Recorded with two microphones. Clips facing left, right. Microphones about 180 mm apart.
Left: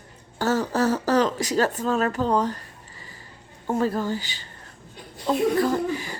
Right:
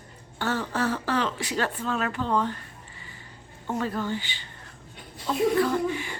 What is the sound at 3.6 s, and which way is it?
Speech, 40° left (ahead or behind).